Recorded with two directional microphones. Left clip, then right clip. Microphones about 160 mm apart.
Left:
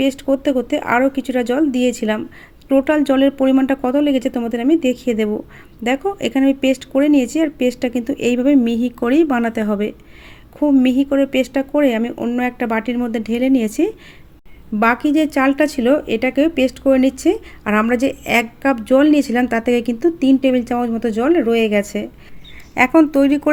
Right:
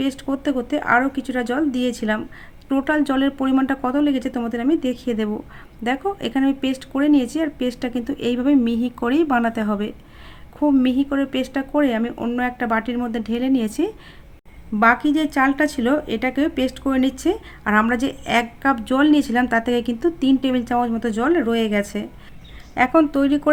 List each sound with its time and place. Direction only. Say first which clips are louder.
0.0 s speech: left 7 dB; 15° left (ahead or behind)